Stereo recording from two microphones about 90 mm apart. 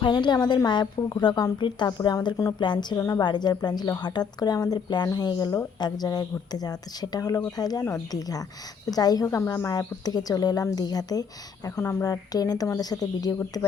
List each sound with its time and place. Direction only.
0.0 s a woman's voice: 60° left (ahead or behind)
3.0 s a woman's voice: 40° left (ahead or behind)
3.2 s speech: 55° left (ahead or behind)
9.2 s speech: 35° left (ahead or behind)
11.8 s speech: 30° left (ahead or behind)
12.0 s speech: 45° left (ahead or behind)
13.4 s a woman's voice: 35° left (ahead or behind)